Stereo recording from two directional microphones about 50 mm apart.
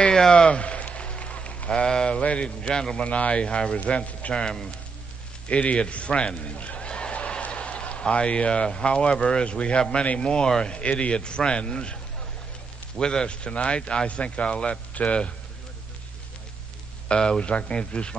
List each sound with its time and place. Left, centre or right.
0.0 s a sound: centre
3.1 s speech: left
17.1 s speech: centre